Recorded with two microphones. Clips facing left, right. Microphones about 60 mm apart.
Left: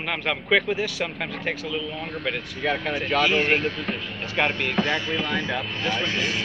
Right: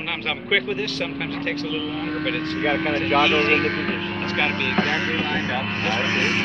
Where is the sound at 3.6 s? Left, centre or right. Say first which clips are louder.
Right 4 dB; right.